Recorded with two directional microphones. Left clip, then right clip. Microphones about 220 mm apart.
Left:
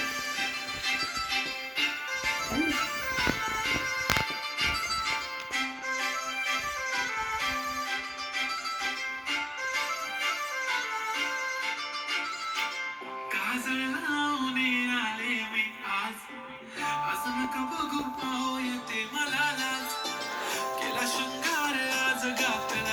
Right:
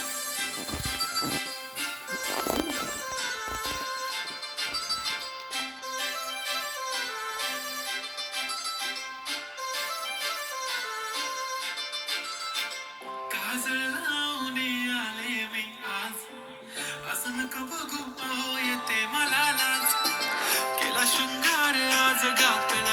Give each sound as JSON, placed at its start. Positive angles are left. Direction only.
{"t": 18.9, "sound": "music", "side_deg": -35}